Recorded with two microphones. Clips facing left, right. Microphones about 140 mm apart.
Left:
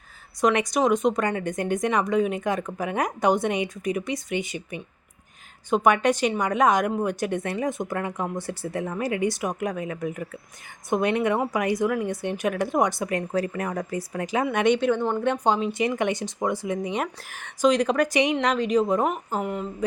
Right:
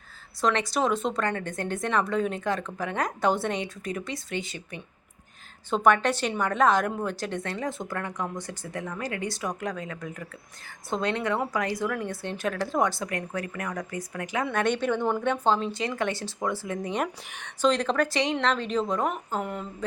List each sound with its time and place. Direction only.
0.4 s a woman's voice: 15° left (ahead or behind)
14.4 s speech: 15° left (ahead or behind)